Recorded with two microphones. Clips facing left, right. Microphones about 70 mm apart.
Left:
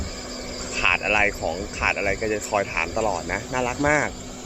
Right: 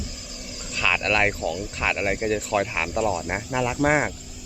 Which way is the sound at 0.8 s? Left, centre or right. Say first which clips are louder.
Even; centre.